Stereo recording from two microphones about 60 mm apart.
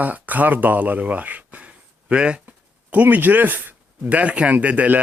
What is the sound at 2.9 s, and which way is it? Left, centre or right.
Speech, right.